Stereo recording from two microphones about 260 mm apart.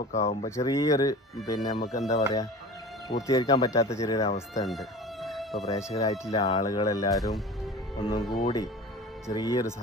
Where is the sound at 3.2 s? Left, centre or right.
Centre.